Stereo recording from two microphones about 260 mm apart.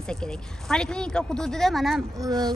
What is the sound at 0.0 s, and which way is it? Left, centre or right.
Speech, centre.